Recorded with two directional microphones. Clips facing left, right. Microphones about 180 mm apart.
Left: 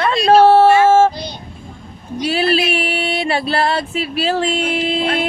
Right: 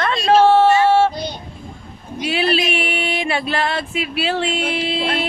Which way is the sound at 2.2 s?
40° left (ahead or behind).